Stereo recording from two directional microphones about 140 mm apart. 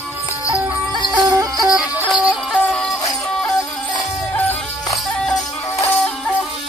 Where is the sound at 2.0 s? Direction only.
10° right (ahead or behind).